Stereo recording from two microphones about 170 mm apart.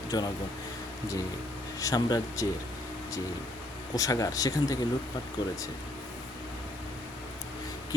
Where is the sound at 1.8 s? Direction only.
20° left (ahead or behind).